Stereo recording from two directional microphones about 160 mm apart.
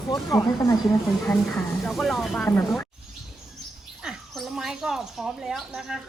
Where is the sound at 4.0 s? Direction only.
Centre (ahead or behind).